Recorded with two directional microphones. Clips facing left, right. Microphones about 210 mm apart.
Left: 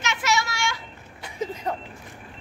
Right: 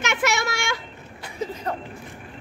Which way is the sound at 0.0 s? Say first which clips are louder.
Right 2 dB; 55° right (ahead or behind).